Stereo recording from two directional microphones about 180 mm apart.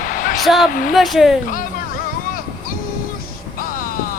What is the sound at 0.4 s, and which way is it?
Speech, centre (ahead or behind).